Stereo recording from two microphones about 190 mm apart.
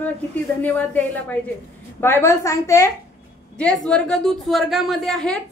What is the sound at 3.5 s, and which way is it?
A woman's voice, 5° left (ahead or behind).